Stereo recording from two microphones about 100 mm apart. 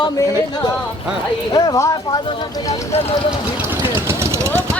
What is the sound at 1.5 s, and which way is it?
Speech, 35° left (ahead or behind).